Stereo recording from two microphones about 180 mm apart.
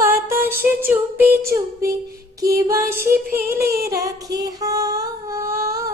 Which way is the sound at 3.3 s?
15° right (ahead or behind).